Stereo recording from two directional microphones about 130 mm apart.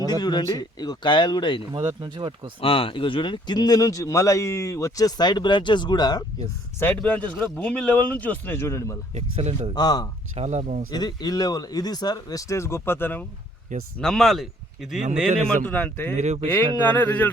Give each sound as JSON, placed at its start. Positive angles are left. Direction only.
{"t": 0.0, "sound": "speech", "side_deg": 30}
{"t": 1.7, "sound": "speech", "side_deg": -30}
{"t": 2.6, "sound": "speech", "side_deg": 45}
{"t": 6.7, "sound": "speech", "side_deg": 15}
{"t": 9.1, "sound": "speech", "side_deg": -50}
{"t": 9.7, "sound": "speech", "side_deg": 30}
{"t": 10.3, "sound": "speech", "side_deg": -55}
{"t": 10.9, "sound": "speech", "side_deg": 30}
{"t": 14.0, "sound": "speech", "side_deg": 5}
{"t": 15.6, "sound": "speech", "side_deg": 15}
{"t": 16.1, "sound": "speech", "side_deg": -60}
{"t": 16.8, "sound": "speech", "side_deg": 15}